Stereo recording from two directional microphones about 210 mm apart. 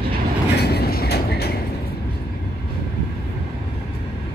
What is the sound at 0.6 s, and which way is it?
Vehicle, 50° left (ahead or behind).